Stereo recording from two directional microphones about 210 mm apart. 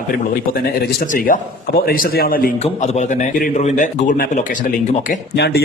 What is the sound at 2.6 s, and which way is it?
A man's voice, 35° left (ahead or behind).